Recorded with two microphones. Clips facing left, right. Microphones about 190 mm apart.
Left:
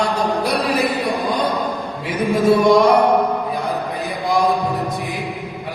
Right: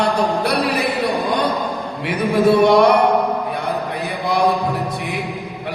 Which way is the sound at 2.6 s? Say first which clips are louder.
Left 1 dB; 65° right (ahead or behind).